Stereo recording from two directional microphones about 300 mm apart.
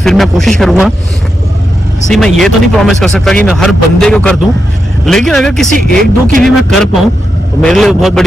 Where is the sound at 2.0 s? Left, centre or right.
Centre.